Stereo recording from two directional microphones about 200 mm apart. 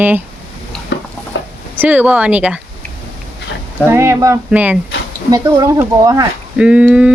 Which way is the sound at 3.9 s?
15° right (ahead or behind).